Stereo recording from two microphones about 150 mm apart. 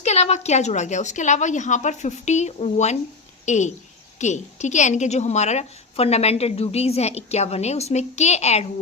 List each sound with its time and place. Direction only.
0.0 s a woman's voice: 50° left (ahead or behind)